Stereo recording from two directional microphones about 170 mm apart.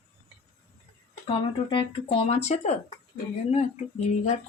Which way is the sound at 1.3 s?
30° left (ahead or behind).